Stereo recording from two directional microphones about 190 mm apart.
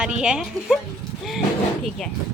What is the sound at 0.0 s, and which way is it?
Speech, 5° right (ahead or behind).